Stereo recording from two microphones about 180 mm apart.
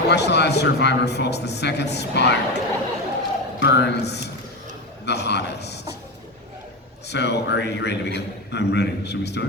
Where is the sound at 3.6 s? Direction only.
70° left (ahead or behind).